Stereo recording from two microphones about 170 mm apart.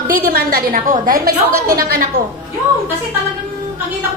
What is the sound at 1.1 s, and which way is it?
Speech, 20° right (ahead or behind).